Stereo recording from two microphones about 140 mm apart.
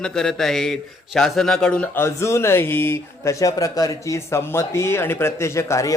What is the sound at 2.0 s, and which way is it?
Speech, 20° left (ahead or behind).